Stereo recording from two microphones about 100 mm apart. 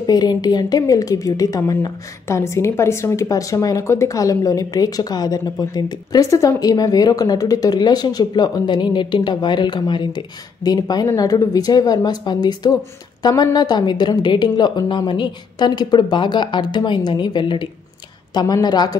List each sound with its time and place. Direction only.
0.0 s a woman's voice: 40° left (ahead or behind)